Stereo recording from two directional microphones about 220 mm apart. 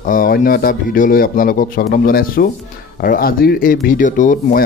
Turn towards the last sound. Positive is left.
turn(degrees=35)  # may be behind; listen again after turning